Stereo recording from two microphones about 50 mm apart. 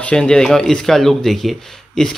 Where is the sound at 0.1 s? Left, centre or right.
Centre.